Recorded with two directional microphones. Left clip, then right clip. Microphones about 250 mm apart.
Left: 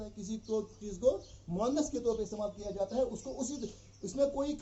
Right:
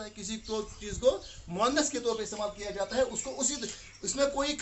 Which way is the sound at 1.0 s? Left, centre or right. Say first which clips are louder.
Right 3 dB; right.